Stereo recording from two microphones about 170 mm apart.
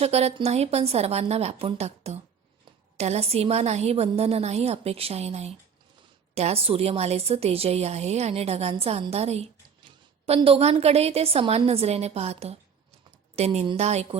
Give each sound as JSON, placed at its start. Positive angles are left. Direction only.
{"t": 0.0, "sound": "a woman's voice", "side_deg": -40}